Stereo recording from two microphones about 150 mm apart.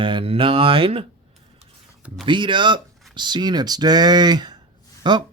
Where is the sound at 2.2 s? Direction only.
30° right (ahead or behind).